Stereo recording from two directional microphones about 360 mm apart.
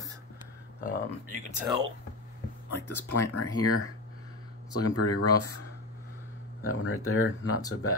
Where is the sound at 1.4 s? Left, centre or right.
Centre.